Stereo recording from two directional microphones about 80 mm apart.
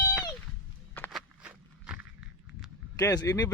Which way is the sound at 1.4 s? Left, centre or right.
Centre.